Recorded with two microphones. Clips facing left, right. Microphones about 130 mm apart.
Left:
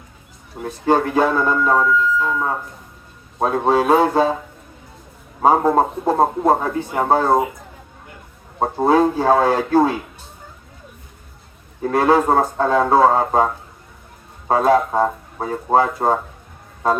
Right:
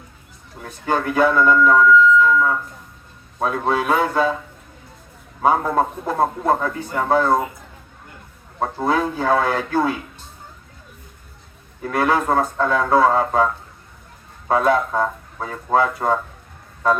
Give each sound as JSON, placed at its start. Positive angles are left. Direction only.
{"t": 0.6, "sound": "speech", "side_deg": 30}
{"t": 5.4, "sound": "speech", "side_deg": 30}
{"t": 8.5, "sound": "speech", "side_deg": 30}
{"t": 11.8, "sound": "speech", "side_deg": 30}